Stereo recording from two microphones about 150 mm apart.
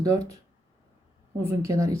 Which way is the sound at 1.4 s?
20° right (ahead or behind).